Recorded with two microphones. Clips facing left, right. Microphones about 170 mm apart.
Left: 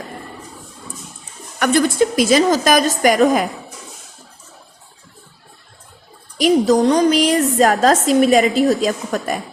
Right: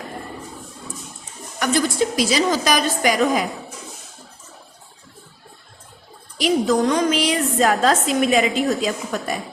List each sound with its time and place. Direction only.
1.5 s a woman's voice: 60° left (ahead or behind)
6.4 s a woman's voice: 35° left (ahead or behind)